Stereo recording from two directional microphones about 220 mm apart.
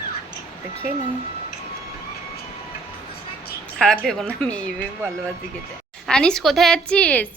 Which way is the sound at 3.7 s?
5° left (ahead or behind).